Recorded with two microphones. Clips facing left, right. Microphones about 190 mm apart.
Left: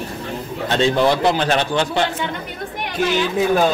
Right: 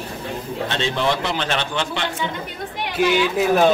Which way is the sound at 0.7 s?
40° left (ahead or behind).